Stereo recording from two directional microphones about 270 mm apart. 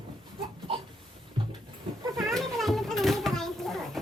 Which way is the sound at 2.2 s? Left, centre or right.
Centre.